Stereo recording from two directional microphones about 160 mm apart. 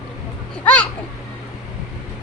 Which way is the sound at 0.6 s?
10° left (ahead or behind).